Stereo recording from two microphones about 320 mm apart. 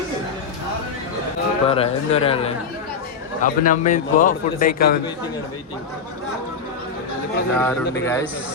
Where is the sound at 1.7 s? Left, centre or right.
Centre.